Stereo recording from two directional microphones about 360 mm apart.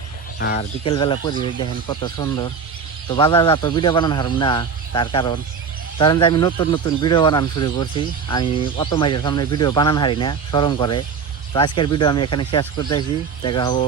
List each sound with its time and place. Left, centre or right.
0.3 s speech: left
0.9 s speech: centre